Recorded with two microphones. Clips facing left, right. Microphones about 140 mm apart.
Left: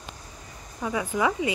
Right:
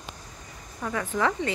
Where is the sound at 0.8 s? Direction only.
10° left (ahead or behind).